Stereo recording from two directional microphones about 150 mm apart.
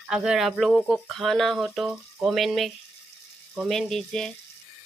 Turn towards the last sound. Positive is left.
turn(degrees=5)  # may be behind; listen again after turning